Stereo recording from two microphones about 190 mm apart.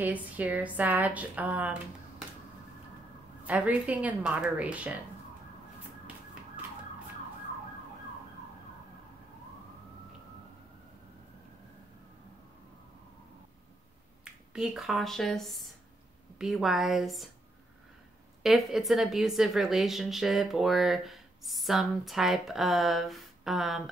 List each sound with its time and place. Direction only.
0.0 s speech: 10° right (ahead or behind)
3.4 s speech: 5° right (ahead or behind)
14.2 s a woman's voice: 5° right (ahead or behind)
18.4 s a woman's voice: centre (ahead or behind)